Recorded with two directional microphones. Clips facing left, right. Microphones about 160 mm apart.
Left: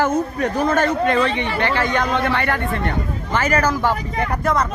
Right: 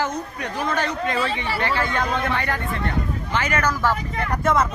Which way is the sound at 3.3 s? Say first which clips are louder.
Left 5 dB; 40° left (ahead or behind).